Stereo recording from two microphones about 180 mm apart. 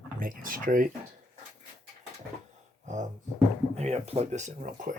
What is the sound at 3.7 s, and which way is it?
Speech, 40° right (ahead or behind).